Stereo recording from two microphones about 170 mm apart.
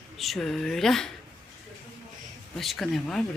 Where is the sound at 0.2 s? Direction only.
Centre (ahead or behind).